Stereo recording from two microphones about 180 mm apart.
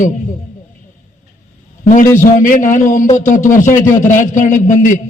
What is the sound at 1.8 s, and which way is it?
A man's voice, 45° left (ahead or behind).